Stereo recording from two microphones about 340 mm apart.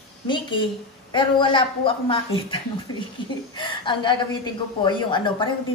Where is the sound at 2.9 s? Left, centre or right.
Left.